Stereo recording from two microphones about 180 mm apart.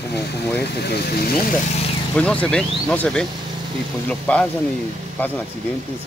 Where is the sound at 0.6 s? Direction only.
65° left (ahead or behind).